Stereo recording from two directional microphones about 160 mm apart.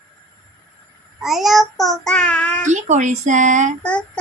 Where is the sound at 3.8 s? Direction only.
5° left (ahead or behind).